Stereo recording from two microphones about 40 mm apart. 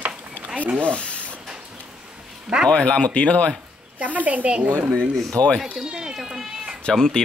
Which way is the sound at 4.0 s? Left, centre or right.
Right.